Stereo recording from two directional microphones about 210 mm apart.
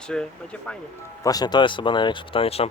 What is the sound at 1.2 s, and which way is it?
Speech, 20° left (ahead or behind).